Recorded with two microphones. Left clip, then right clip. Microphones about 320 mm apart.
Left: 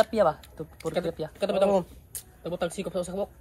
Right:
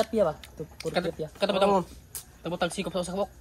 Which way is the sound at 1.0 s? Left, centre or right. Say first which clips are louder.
Right 1 dB; centre.